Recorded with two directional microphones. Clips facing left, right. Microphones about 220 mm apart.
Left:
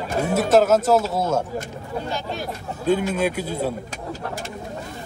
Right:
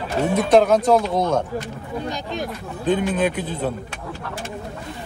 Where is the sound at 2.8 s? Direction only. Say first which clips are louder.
Right 1 dB; 10° left (ahead or behind).